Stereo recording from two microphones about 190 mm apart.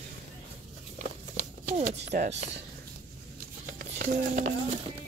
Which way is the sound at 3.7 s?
45° right (ahead or behind).